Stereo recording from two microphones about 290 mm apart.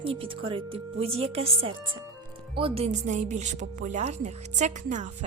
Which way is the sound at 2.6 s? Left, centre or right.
Centre.